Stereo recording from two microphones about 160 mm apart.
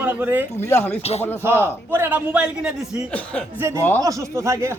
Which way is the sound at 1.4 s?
15° right (ahead or behind).